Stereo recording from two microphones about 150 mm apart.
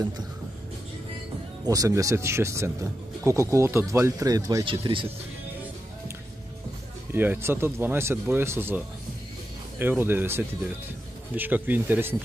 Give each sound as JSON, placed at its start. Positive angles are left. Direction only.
{"t": 1.7, "sound": "speech", "side_deg": -20}
{"t": 4.6, "sound": "speech", "side_deg": -35}
{"t": 7.2, "sound": "speech", "side_deg": -15}